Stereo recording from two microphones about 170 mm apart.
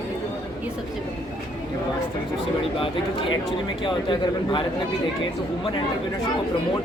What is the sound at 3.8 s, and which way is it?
Speech, 30° left (ahead or behind).